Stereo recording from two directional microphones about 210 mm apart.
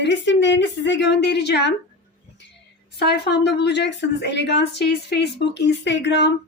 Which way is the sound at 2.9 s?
50° left (ahead or behind).